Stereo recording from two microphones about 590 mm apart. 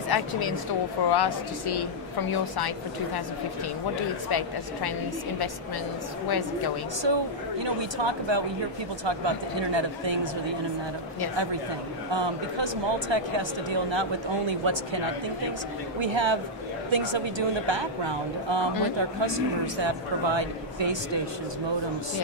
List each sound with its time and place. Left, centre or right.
0.1 s a woman's voice: left
4.3 s a woman's voice: left
6.2 s a woman's voice: left
7.0 s a man's voice: right
12.1 s a man's voice: right
16.0 s a man's voice: right